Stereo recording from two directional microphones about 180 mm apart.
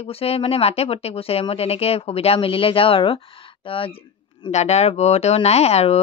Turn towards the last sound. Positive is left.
turn(degrees=35)  # may be behind; listen again after turning